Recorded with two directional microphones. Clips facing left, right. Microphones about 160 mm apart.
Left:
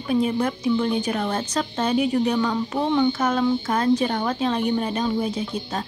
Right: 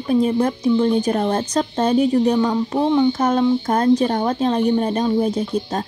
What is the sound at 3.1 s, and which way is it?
A woman's voice, 35° right (ahead or behind).